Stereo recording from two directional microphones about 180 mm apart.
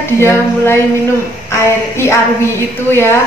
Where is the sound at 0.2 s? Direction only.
15° left (ahead or behind).